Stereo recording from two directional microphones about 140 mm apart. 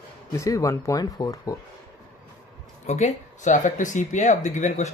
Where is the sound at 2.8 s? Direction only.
55° left (ahead or behind).